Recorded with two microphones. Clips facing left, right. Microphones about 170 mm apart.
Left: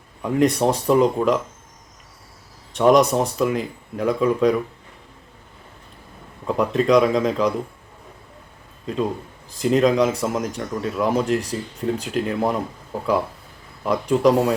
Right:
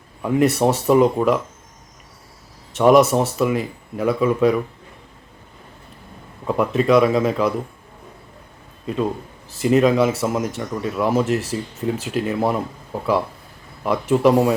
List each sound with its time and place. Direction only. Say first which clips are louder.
0.2 s speech: right 1 dB; 5° right (ahead or behind)
2.7 s speech: right 2 dB; 5° right (ahead or behind)
6.5 s speech: right 1 dB; 5° right (ahead or behind)
9.5 s speech: right 2 dB; 5° right (ahead or behind)
13.8 s speech: right 1 dB; 5° right (ahead or behind)